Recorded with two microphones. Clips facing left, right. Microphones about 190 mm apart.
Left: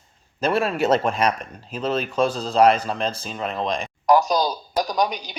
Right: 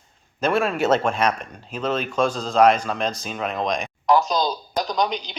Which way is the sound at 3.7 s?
30° left (ahead or behind).